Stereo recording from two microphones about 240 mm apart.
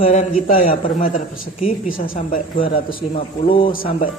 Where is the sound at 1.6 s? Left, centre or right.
Left.